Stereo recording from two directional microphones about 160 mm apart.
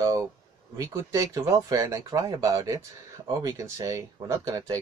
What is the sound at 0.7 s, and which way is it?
Speech, 20° right (ahead or behind).